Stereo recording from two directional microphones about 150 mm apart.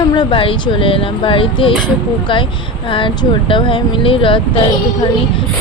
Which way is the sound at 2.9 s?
35° left (ahead or behind).